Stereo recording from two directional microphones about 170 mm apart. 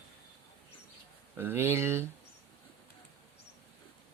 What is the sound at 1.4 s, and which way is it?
Speech, 15° right (ahead or behind).